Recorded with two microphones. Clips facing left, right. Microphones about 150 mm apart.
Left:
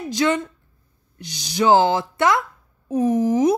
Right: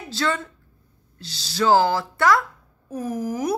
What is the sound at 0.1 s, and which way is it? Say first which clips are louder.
Speech: left 5 dB; 15° left (ahead or behind).